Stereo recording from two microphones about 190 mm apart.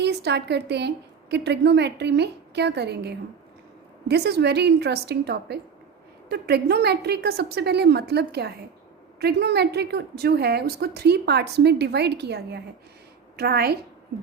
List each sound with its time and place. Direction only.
0.0 s a woman's voice: 60° right (ahead or behind)